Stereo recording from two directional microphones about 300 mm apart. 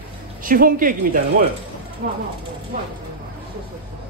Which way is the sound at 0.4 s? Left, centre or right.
Right.